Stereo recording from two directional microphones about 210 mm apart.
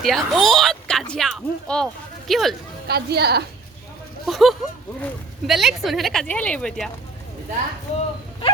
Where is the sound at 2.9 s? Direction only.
50° right (ahead or behind).